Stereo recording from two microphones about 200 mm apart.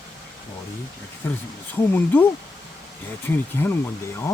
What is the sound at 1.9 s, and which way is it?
Speech, 10° left (ahead or behind).